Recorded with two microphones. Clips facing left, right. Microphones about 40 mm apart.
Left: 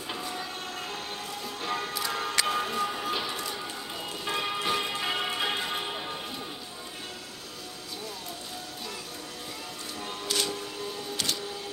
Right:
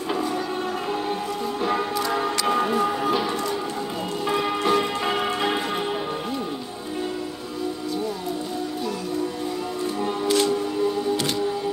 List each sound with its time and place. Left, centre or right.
1.6 s music: centre
3.2 s a sound: centre
4.3 s church bell: centre
10.0 s music: right